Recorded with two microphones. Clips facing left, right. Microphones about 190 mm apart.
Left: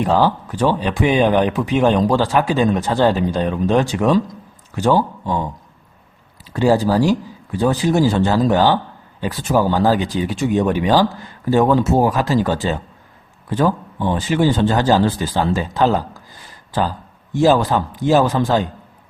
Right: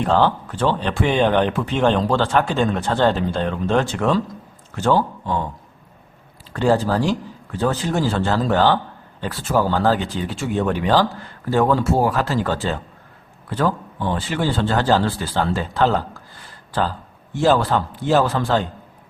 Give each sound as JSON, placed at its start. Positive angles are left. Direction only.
{"t": 0.0, "sound": "speech", "side_deg": 10}
{"t": 6.5, "sound": "speech", "side_deg": 10}
{"t": 17.3, "sound": "speech", "side_deg": 15}